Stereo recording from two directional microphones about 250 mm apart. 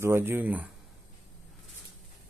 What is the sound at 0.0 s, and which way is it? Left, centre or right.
Speech, centre.